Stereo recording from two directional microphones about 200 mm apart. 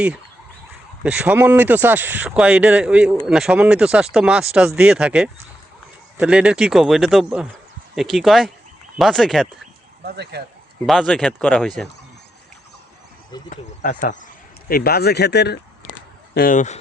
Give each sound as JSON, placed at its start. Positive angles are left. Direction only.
{"t": 1.0, "sound": "speech", "side_deg": -5}
{"t": 10.0, "sound": "speech", "side_deg": -55}
{"t": 10.8, "sound": "speech", "side_deg": 0}
{"t": 13.5, "sound": "speech", "side_deg": 40}
{"t": 14.7, "sound": "speech", "side_deg": 50}
{"t": 16.3, "sound": "speech", "side_deg": 45}